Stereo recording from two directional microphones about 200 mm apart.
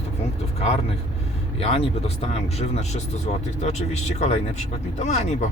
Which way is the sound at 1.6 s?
30° left (ahead or behind).